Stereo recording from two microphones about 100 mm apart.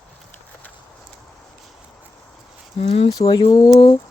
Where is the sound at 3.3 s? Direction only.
60° left (ahead or behind).